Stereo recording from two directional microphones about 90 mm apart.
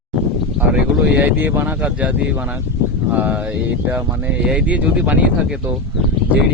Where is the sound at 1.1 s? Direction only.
20° right (ahead or behind).